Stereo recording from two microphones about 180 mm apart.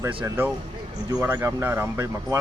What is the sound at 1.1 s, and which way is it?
Speech, 15° right (ahead or behind).